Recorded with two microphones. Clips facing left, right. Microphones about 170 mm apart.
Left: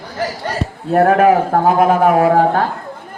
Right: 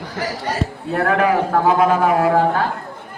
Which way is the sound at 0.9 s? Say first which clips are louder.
Left 6 dB; 45° left (ahead or behind).